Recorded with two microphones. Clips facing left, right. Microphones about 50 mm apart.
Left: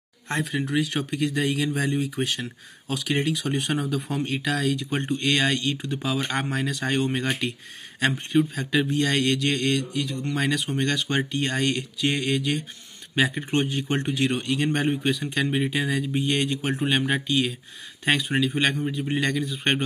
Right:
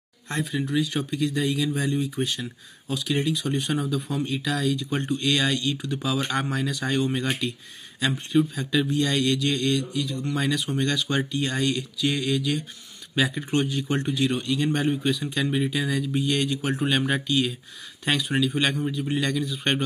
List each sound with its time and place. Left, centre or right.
0.4 s speech: left
3.4 s speech: left
4.9 s speech: left
8.5 s speech: left
15.4 s speech: left